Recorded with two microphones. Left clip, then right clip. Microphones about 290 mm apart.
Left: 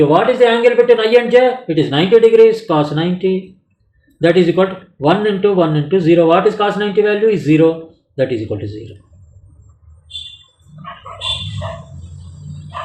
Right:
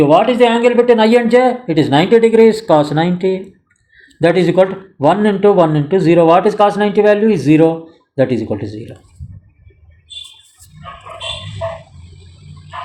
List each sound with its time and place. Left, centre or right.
0.1 s speech: right